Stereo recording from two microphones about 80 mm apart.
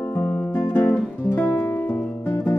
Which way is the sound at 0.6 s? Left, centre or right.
Left.